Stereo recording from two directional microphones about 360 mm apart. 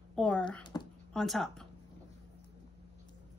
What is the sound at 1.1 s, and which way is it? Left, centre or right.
Speech, centre.